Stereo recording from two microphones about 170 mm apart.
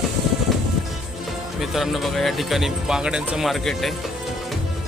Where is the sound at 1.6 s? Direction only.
Centre (ahead or behind).